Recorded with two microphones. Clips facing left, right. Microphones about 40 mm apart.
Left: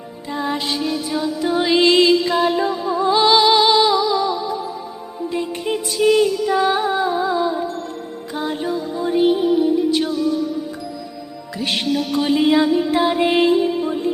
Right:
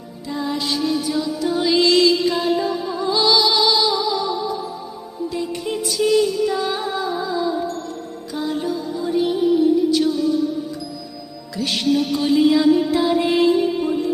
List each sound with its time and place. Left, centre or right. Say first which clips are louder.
0.3 s music: left 1 dB; left
11.5 s music: right 1 dB; left